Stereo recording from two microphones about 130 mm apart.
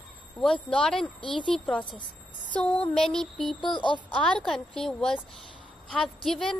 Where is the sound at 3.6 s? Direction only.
35° left (ahead or behind).